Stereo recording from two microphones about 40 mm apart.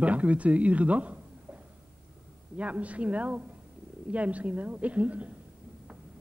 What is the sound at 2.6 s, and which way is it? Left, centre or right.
A man's voice, right.